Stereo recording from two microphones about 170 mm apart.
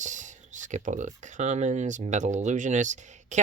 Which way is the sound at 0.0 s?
45° right (ahead or behind).